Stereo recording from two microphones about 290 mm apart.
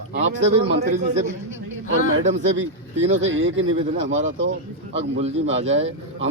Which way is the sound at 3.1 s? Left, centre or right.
Right.